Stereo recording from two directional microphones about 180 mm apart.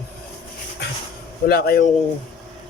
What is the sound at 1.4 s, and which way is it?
Speech, 55° left (ahead or behind).